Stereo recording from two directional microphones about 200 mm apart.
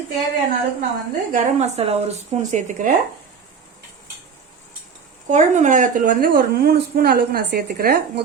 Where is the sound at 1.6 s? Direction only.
30° right (ahead or behind).